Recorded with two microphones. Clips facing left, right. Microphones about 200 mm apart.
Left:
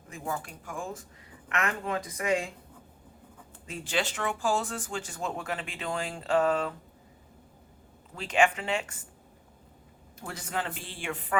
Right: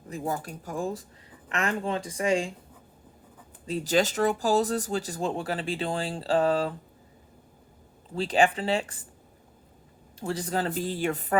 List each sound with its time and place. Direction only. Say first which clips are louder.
0.1 s speech: right 4 dB; 40° right (ahead or behind)
3.7 s speech: right 7 dB; 35° right (ahead or behind)
8.1 s speech: right 2 dB; 35° right (ahead or behind)
10.2 s speech: right 6 dB; 30° right (ahead or behind)